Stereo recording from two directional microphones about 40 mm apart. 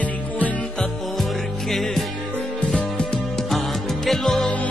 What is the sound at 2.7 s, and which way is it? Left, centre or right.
Music, left.